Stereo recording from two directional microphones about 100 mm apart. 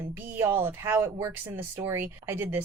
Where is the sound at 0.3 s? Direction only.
25° right (ahead or behind).